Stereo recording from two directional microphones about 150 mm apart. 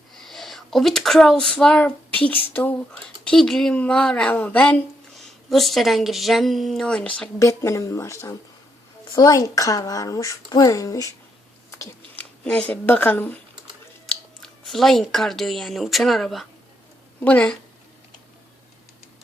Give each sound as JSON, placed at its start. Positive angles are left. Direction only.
{"t": 0.1, "sound": "speech", "side_deg": 0}
{"t": 7.3, "sound": "speech", "side_deg": 20}
{"t": 12.1, "sound": "speech", "side_deg": 10}